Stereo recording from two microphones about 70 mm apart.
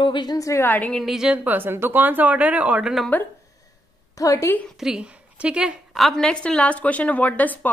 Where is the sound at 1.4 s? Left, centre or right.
Right.